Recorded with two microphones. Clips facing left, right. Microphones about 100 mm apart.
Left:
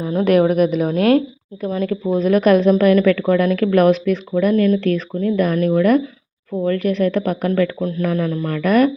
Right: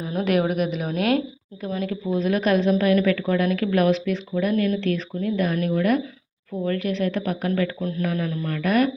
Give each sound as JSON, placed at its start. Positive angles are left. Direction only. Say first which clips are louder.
{"t": 0.0, "sound": "a woman's voice", "louder": "left 7 dB", "side_deg": 30}
{"t": 0.3, "sound": "speech", "louder": "left 9 dB", "side_deg": 45}
{"t": 1.8, "sound": "speech", "louder": "left 6 dB", "side_deg": 60}